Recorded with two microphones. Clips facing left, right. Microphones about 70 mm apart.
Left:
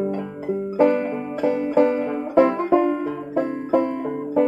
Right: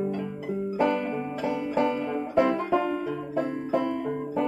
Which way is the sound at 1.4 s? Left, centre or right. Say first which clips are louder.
Left 8 dB; left.